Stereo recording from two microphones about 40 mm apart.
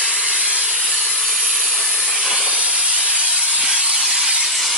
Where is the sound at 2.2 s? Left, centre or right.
Right.